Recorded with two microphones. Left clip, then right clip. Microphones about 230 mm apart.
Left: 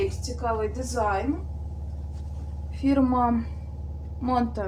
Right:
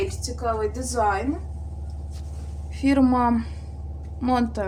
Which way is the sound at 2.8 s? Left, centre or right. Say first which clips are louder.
Right 3 dB; right.